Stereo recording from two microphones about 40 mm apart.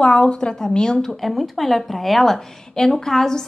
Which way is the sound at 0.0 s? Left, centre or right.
Left.